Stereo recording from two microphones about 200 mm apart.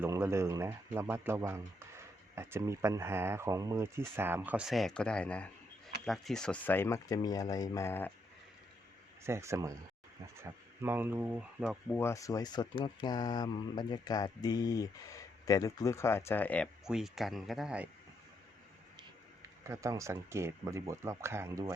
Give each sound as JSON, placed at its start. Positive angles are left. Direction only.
{"t": 0.0, "sound": "speech", "side_deg": -10}
{"t": 9.2, "sound": "speech", "side_deg": -15}
{"t": 11.9, "sound": "speech", "side_deg": 10}
{"t": 19.6, "sound": "speech", "side_deg": -15}